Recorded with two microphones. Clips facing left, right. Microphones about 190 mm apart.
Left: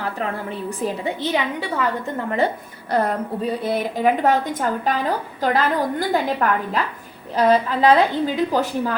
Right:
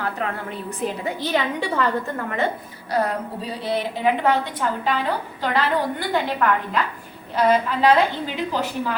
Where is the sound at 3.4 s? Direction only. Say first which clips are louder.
Left 3 dB; 50° left (ahead or behind).